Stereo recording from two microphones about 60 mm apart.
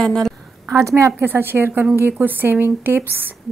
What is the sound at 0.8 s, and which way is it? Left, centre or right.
Speech, right.